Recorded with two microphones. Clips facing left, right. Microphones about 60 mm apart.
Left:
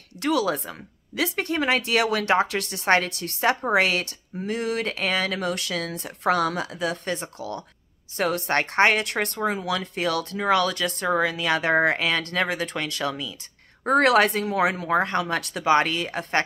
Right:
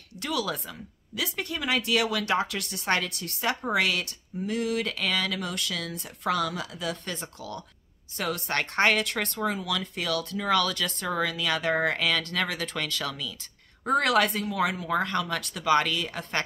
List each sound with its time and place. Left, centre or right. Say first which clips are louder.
0.2 s speech: left 7 dB; left
8.2 s speech: left 6 dB; left
13.8 s speech: left 5 dB; left